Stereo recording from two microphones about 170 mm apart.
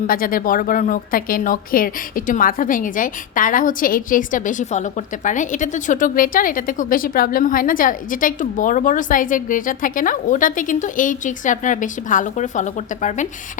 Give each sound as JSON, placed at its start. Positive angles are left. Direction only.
{"t": 0.1, "sound": "speech", "side_deg": 55}